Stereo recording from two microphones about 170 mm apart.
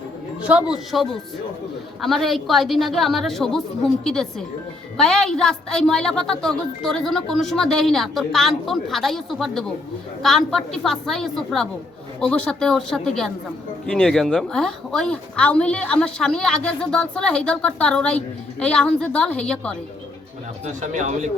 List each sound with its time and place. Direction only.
0.7 s speech: centre (ahead or behind)
20.7 s speech: 45° right (ahead or behind)